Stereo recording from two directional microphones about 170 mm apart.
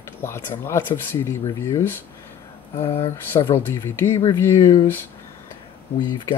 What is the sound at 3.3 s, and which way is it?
Speech, 15° left (ahead or behind).